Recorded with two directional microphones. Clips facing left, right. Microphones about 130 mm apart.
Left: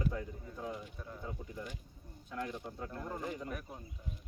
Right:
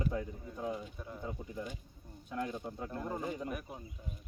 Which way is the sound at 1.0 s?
15° right (ahead or behind).